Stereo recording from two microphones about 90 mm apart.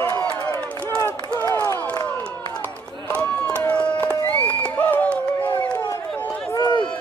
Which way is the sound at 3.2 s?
15° left (ahead or behind).